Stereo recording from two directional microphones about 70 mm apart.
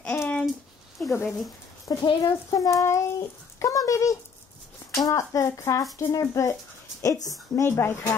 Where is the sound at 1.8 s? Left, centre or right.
Left.